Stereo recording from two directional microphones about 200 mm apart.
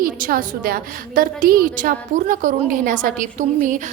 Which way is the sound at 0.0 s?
45° right (ahead or behind).